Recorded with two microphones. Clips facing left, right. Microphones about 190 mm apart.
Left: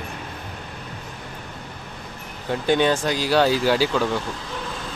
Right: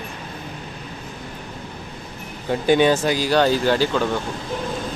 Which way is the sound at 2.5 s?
5° right (ahead or behind).